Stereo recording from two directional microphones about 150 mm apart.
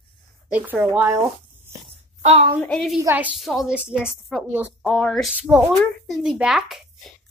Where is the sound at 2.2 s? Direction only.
45° right (ahead or behind).